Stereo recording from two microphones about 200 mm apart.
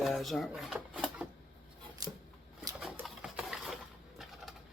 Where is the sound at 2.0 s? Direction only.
20° right (ahead or behind).